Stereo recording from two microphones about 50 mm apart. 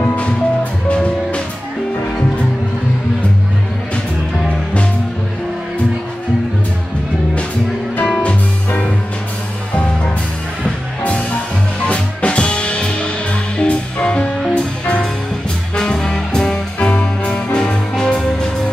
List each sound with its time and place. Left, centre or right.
0.0 s music: left
8.1 s music: left
11.9 s music: left